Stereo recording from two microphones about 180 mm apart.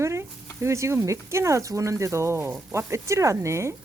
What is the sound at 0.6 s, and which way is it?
Speech, 15° right (ahead or behind).